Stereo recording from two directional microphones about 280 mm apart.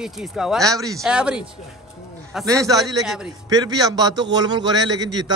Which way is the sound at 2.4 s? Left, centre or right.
Centre.